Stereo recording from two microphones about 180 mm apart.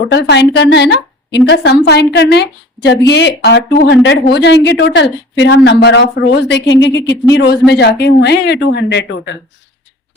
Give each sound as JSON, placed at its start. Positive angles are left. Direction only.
{"t": 0.1, "sound": "a woman's voice", "side_deg": 70}
{"t": 7.3, "sound": "a woman's voice", "side_deg": 65}